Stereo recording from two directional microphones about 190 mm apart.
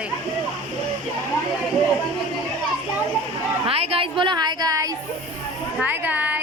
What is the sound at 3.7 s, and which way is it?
A woman's voice, 30° right (ahead or behind).